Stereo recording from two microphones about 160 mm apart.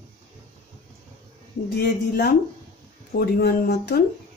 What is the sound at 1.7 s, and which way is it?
Speech, 90° left.